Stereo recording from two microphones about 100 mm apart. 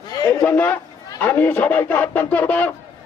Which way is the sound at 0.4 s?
15° left (ahead or behind).